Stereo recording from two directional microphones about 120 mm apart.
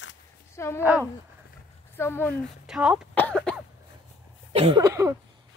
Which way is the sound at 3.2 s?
10° left (ahead or behind).